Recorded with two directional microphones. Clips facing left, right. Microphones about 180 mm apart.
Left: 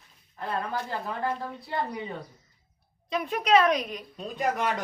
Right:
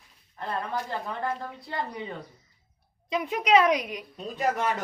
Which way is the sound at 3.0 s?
15° right (ahead or behind).